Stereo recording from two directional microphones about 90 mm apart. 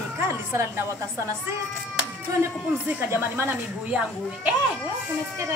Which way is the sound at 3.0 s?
25° right (ahead or behind).